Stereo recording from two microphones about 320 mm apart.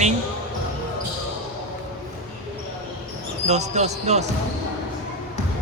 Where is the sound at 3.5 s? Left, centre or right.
Right.